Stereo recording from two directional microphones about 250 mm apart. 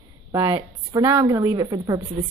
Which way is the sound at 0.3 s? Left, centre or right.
Centre.